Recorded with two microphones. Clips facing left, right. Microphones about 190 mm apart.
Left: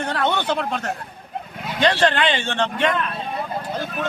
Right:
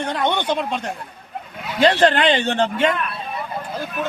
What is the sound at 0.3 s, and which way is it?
Speech, 15° right (ahead or behind).